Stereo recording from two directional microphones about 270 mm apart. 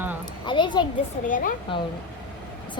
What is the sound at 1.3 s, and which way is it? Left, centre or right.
Speech, left.